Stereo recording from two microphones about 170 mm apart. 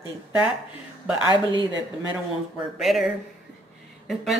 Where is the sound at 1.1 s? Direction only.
30° left (ahead or behind).